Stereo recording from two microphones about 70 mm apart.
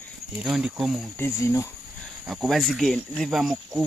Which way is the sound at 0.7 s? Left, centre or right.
Centre.